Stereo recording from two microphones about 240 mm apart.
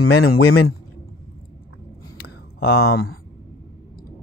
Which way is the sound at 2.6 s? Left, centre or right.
Left.